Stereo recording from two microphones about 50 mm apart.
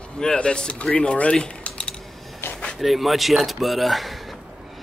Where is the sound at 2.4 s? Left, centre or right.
Left.